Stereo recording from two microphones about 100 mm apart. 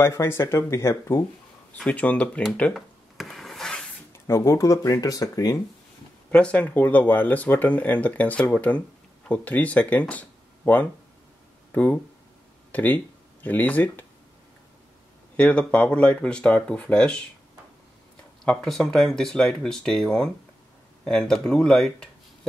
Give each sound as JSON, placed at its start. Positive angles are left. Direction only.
{"t": 0.0, "sound": "speech", "side_deg": 25}
{"t": 1.8, "sound": "speech", "side_deg": 10}
{"t": 2.7, "sound": "a sound", "side_deg": 0}
{"t": 4.3, "sound": "speech", "side_deg": 35}
{"t": 6.3, "sound": "speech", "side_deg": 10}
{"t": 15.3, "sound": "speech", "side_deg": 10}
{"t": 18.4, "sound": "speech", "side_deg": 5}